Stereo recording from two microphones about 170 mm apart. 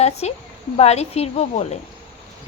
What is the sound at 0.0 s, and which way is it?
A woman's voice, 40° left (ahead or behind).